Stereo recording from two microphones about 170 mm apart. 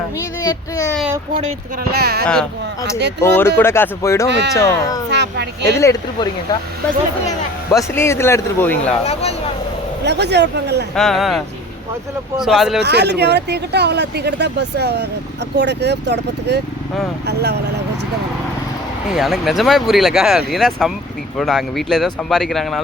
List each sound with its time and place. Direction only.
0.4 s speech: 20° left (ahead or behind)
1.9 s speech: 70° right (ahead or behind)
2.2 s speech: 5° left (ahead or behind); by 5.0 s 20° left (ahead or behind)
5.1 s a woman's voice: 90° right
5.6 s speech: 15° left (ahead or behind)
7.7 s speech: 15° left (ahead or behind)
10.0 s speech: 85° right
10.9 s speech: centre (ahead or behind)
12.8 s speech: 80° right
15.5 s speech: 90° right
19.1 s speech: centre (ahead or behind)